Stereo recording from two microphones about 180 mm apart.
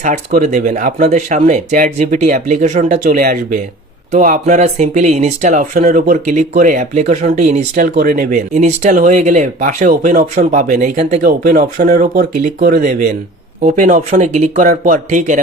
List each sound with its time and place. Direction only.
0.0 s speech: 45° right (ahead or behind)
7.9 s speech: 50° right (ahead or behind)